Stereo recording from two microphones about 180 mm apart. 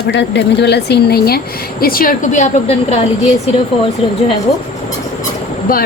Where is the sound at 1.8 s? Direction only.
55° left (ahead or behind).